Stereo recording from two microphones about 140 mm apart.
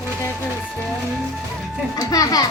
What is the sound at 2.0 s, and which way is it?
Speech, 25° left (ahead or behind).